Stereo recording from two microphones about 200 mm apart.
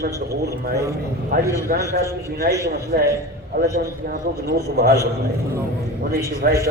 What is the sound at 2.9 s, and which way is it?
A man's voice, 45° right (ahead or behind).